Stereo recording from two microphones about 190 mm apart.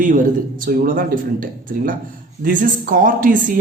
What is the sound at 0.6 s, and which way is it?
Speech, 45° right (ahead or behind).